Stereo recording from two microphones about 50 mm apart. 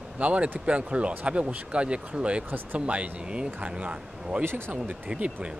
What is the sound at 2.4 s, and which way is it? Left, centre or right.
Speech, right.